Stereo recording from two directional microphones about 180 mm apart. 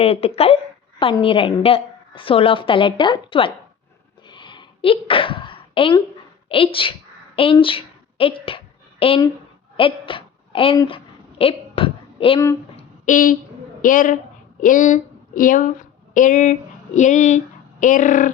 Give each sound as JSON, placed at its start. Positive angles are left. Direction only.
{"t": 0.0, "sound": "a woman's voice", "side_deg": 35}
{"t": 4.3, "sound": "sneeze", "side_deg": 25}
{"t": 6.5, "sound": "a woman's voice", "side_deg": 30}
{"t": 7.6, "sound": "a sound", "side_deg": 30}
{"t": 13.1, "sound": "a woman's voice", "side_deg": 50}